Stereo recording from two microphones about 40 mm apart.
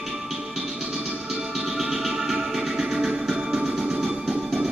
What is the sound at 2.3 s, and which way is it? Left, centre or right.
Music, centre.